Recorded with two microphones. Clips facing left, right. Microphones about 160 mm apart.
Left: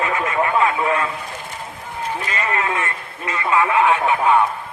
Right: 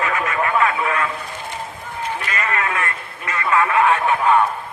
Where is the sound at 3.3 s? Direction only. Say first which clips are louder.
Even; 20° left (ahead or behind).